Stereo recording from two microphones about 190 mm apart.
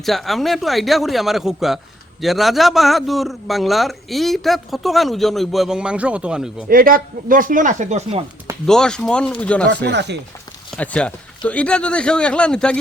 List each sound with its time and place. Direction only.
0.0 s a man's voice: centre (ahead or behind)
6.7 s speech: 50° right (ahead or behind)
8.6 s a man's voice: 5° left (ahead or behind)
9.6 s speech: 65° right (ahead or behind)
10.8 s a man's voice: 5° left (ahead or behind)